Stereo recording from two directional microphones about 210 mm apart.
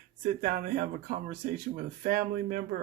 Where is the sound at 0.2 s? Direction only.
40° right (ahead or behind).